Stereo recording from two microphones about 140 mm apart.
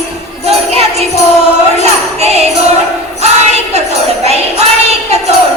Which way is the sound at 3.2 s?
50° right (ahead or behind).